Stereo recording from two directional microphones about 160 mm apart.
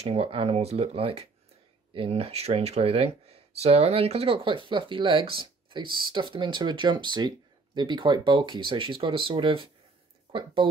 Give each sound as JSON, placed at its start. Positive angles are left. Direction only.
{"t": 0.0, "sound": "speech", "side_deg": -40}